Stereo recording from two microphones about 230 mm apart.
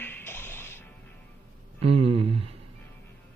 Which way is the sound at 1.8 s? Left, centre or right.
Right.